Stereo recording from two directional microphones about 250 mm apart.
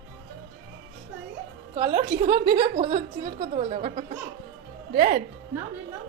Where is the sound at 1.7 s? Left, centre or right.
Right.